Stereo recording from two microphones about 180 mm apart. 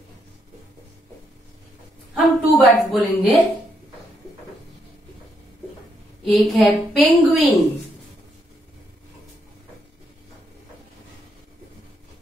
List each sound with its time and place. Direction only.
2.1 s a woman's voice: centre (ahead or behind)
6.2 s a woman's voice: centre (ahead or behind)